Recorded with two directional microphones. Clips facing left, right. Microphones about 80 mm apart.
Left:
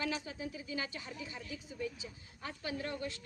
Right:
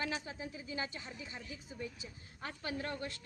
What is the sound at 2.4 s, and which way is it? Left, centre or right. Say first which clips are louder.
Speech: even; right.